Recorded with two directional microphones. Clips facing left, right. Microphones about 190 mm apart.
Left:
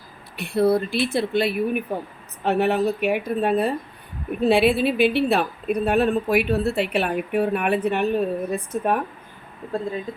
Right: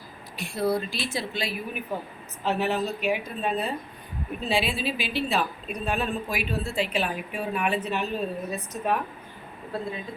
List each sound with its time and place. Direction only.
0.3 s a woman's voice: 60° left (ahead or behind)